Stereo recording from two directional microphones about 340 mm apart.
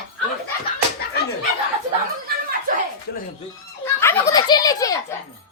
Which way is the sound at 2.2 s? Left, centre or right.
Right.